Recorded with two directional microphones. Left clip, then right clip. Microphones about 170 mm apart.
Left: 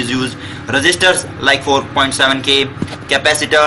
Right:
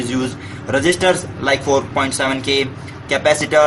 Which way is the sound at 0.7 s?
45° right (ahead or behind).